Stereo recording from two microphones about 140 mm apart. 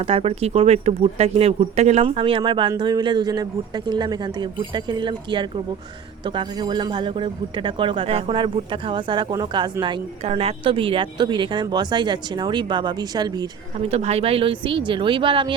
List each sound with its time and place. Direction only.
0.0 s a man's voice: 45° right (ahead or behind)
10.2 s a man's voice: 45° right (ahead or behind); by 13.5 s 30° right (ahead or behind)
13.8 s a man's voice: 50° right (ahead or behind)